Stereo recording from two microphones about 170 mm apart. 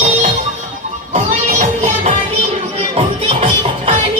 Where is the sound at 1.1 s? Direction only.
40° right (ahead or behind).